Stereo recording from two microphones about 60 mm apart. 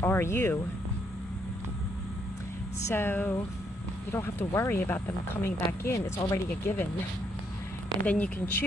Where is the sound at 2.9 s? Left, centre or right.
Left.